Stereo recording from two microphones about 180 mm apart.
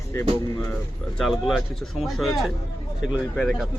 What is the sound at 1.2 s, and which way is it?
Speech, centre (ahead or behind).